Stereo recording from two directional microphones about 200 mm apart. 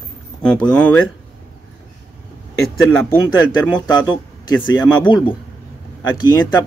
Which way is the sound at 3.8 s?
20° left (ahead or behind).